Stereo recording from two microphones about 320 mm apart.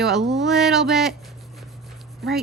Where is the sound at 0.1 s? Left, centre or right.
Centre.